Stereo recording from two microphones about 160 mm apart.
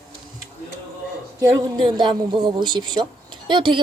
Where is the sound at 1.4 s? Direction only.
20° right (ahead or behind).